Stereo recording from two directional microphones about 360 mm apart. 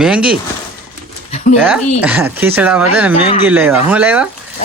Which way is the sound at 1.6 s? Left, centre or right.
Centre.